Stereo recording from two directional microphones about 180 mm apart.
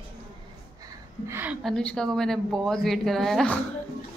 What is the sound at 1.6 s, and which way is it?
A woman's voice, 5° left (ahead or behind).